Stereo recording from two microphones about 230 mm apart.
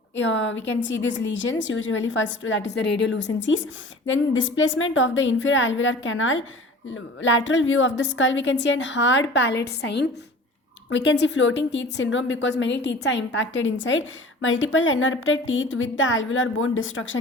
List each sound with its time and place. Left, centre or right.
0.2 s a woman's voice: left